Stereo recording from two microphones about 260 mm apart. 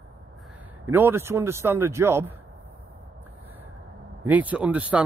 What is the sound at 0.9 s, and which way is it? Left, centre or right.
A man's voice, centre.